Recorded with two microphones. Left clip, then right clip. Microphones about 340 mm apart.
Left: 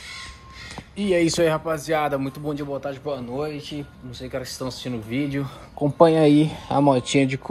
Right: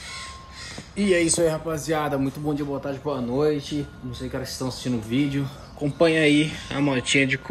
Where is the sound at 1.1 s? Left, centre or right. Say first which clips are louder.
Left 1 dB; centre.